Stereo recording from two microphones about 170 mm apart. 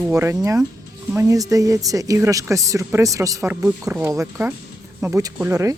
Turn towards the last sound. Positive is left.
turn(degrees=-20)  # may be behind; listen again after turning